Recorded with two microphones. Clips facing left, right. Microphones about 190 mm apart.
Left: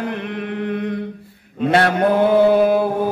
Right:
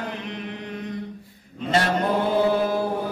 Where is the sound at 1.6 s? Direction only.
65° left (ahead or behind).